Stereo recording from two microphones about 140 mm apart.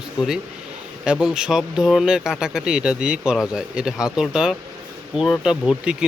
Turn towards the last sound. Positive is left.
turn(degrees=-5)  # may be behind; listen again after turning